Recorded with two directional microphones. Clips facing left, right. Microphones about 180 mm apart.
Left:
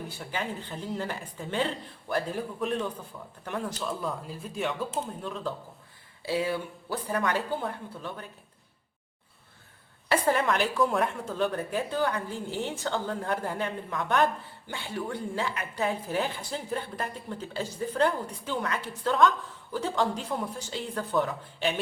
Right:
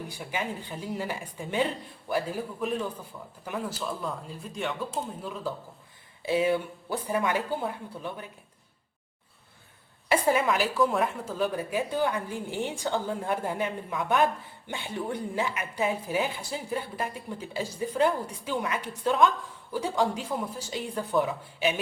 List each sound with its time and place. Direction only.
0.1 s a woman's voice: 15° right (ahead or behind)
6.2 s a woman's voice: 20° right (ahead or behind)
10.1 s a woman's voice: 10° right (ahead or behind)
14.7 s a woman's voice: 20° right (ahead or behind)